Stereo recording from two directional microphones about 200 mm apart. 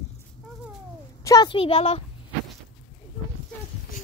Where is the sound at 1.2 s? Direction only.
20° left (ahead or behind).